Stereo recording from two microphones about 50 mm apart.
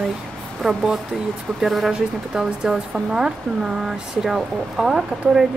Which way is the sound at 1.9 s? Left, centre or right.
Centre.